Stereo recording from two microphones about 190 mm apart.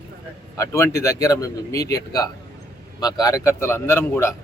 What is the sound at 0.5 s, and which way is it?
A man's voice, 15° left (ahead or behind).